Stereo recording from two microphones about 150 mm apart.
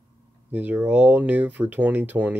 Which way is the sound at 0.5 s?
10° right (ahead or behind).